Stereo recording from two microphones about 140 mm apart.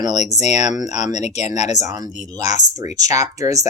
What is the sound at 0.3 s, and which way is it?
Speech, 55° left (ahead or behind).